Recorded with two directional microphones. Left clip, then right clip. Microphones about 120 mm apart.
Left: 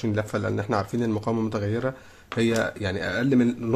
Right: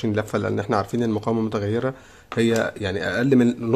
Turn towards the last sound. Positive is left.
turn(degrees=-35)  # may be behind; listen again after turning